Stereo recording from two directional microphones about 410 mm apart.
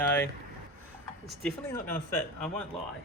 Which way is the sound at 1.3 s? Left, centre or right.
Centre.